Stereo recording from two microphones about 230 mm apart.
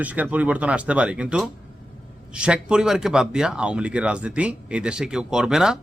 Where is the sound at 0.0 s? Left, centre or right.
Centre.